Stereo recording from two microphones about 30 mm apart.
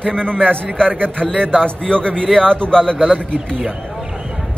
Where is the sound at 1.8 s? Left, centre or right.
Left.